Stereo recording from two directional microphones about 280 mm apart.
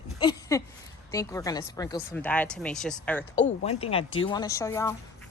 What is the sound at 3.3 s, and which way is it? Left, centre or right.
A woman's voice, left.